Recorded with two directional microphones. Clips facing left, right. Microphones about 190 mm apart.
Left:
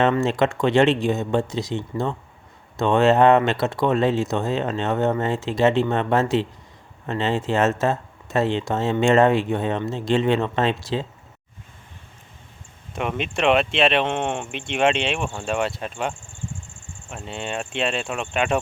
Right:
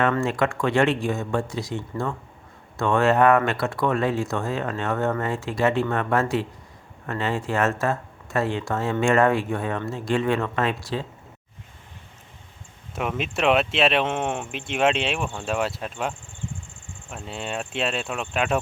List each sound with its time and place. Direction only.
0.0 s speech: 25° left (ahead or behind)
12.9 s speech: 5° right (ahead or behind)